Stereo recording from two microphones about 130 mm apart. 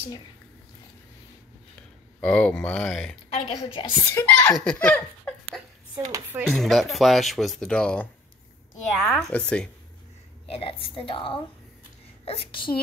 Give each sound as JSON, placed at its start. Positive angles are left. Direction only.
{"t": 2.1, "sound": "speech", "side_deg": 10}
{"t": 3.4, "sound": "a woman's voice", "side_deg": 40}
{"t": 4.0, "sound": "a child's voice", "side_deg": 20}
{"t": 4.6, "sound": "speech", "side_deg": 10}
{"t": 5.9, "sound": "speech", "side_deg": -35}
{"t": 6.5, "sound": "speech", "side_deg": 0}
{"t": 10.5, "sound": "a woman's voice", "side_deg": 45}